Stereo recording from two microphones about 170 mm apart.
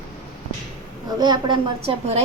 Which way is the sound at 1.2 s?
25° right (ahead or behind).